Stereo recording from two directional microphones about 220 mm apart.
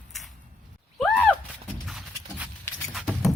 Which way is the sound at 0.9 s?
5° left (ahead or behind).